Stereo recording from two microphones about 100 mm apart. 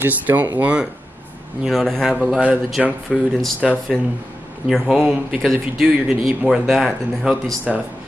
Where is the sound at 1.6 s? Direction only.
Centre (ahead or behind).